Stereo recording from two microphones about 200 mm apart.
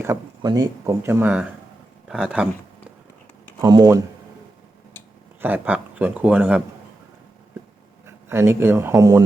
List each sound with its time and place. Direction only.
0.0 s speech: 15° right (ahead or behind)
3.6 s speech: 20° right (ahead or behind)
5.4 s speech: 10° right (ahead or behind)
8.0 s speech: 10° right (ahead or behind)